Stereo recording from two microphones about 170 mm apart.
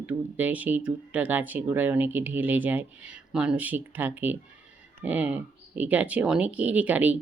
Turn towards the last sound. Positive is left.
turn(degrees=-10)  # may be behind; listen again after turning